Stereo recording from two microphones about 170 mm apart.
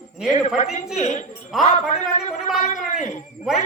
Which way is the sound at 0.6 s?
45° left (ahead or behind).